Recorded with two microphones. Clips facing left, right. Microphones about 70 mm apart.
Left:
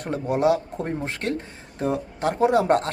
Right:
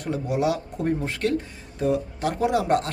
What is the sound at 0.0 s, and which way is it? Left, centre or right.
Speech, left.